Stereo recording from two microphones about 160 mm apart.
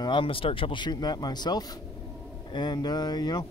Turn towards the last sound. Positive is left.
turn(degrees=25)  # may be behind; listen again after turning